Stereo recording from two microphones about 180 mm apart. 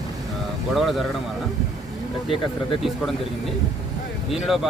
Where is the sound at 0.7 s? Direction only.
Centre (ahead or behind).